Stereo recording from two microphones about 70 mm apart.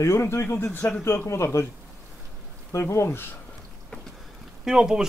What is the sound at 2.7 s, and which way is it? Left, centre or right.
Speech, left.